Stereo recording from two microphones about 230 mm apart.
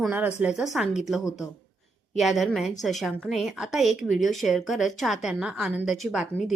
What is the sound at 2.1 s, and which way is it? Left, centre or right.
A woman's voice, centre.